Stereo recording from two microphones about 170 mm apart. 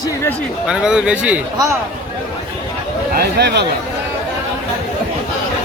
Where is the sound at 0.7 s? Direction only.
5° right (ahead or behind).